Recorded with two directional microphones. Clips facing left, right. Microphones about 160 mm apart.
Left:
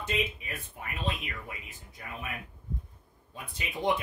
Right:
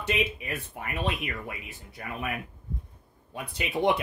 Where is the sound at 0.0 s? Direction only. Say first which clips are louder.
Right 4 dB; 75° right (ahead or behind).